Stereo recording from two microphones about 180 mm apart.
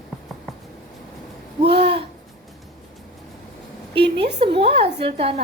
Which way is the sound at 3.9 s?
70° right (ahead or behind).